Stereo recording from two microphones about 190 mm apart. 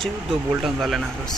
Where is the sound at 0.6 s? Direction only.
Centre (ahead or behind).